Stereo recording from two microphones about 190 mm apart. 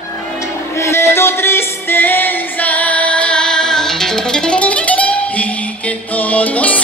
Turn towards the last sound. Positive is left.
turn(degrees=5)  # may be behind; listen again after turning